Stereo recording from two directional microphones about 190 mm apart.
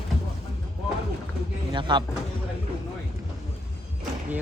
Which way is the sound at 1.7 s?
25° right (ahead or behind).